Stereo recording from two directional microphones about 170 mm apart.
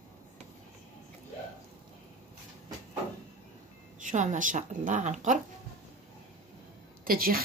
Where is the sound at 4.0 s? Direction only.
45° right (ahead or behind).